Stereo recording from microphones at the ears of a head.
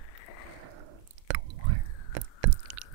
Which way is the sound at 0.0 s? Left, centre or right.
Left.